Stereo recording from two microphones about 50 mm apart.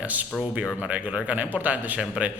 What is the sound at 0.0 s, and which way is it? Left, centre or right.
A man's voice, right.